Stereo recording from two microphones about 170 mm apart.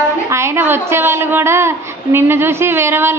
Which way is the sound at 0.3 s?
15° right (ahead or behind).